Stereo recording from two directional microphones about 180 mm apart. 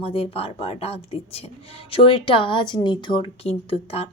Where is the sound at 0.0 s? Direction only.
30° left (ahead or behind).